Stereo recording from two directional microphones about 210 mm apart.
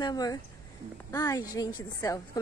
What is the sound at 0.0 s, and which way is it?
A woman's voice, 20° left (ahead or behind).